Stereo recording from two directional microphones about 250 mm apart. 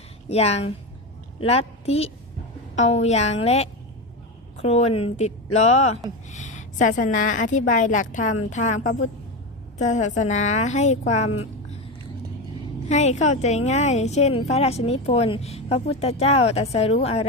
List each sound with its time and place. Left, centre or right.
0.3 s a woman's voice: left
12.9 s a woman's voice: left